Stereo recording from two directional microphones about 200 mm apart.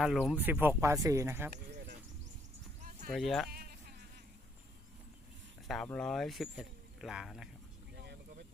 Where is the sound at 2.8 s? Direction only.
40° right (ahead or behind).